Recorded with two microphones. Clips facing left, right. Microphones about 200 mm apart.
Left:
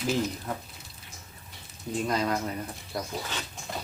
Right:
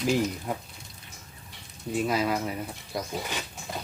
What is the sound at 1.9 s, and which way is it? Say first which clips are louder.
Speech: right 2 dB; 5° right (ahead or behind).